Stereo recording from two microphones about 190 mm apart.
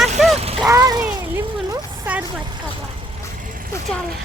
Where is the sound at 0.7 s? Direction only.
15° right (ahead or behind).